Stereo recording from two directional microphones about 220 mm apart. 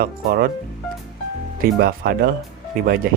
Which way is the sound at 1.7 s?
40° right (ahead or behind).